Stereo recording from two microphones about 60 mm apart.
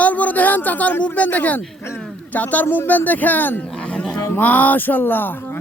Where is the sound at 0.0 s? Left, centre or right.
Left.